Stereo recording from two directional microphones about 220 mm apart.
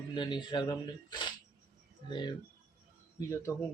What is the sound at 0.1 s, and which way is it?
A man's voice, 20° left (ahead or behind).